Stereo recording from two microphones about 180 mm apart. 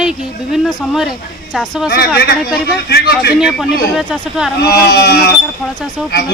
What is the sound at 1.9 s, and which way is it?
A man's voice, 60° left (ahead or behind).